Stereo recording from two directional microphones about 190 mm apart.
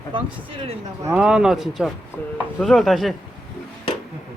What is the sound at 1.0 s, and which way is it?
Speech, 10° right (ahead or behind).